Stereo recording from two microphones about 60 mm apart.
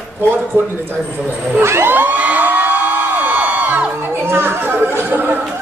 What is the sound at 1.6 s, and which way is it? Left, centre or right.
Speech, right.